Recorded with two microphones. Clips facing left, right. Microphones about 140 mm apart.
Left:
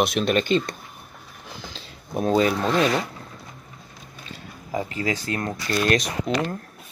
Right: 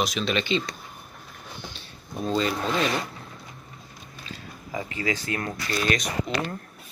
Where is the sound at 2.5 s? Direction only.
Centre (ahead or behind).